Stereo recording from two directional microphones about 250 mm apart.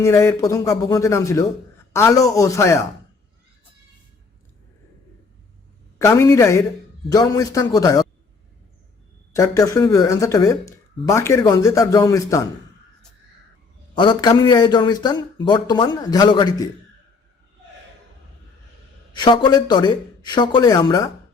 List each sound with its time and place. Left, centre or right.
0.0 s speech: centre
6.1 s speech: centre
9.3 s speech: centre
13.9 s speech: centre
19.1 s speech: centre